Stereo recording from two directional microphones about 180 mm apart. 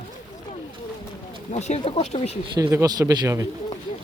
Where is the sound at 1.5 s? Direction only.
40° left (ahead or behind).